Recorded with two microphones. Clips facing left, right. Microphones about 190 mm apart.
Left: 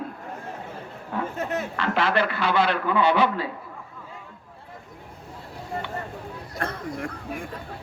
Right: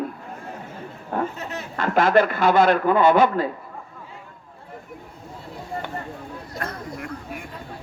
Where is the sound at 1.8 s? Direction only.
45° right (ahead or behind).